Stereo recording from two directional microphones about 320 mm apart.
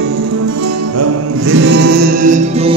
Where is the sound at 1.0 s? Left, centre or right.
Right.